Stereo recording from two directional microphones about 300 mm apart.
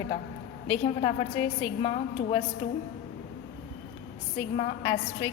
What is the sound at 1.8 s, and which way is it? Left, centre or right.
Speech, left.